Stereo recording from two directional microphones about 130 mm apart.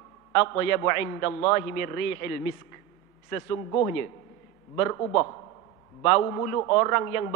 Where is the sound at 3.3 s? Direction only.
20° left (ahead or behind).